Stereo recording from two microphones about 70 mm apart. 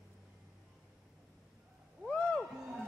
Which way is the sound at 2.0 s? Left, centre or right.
Centre.